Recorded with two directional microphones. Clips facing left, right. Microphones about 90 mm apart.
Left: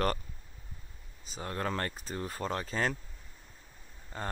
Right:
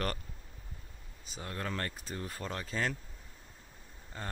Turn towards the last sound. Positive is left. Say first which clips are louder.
# left 4 dB
turn(degrees=45)  # may be behind; listen again after turning